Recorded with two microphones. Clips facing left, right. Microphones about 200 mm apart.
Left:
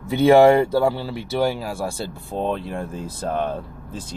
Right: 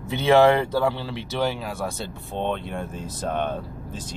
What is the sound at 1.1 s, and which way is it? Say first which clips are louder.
Speech: left 4 dB; 40° left (ahead or behind).